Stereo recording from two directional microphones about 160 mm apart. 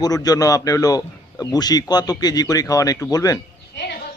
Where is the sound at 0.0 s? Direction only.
25° left (ahead or behind).